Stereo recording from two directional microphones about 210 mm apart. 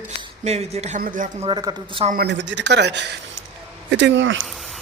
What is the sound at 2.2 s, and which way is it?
Speech, 55° right (ahead or behind).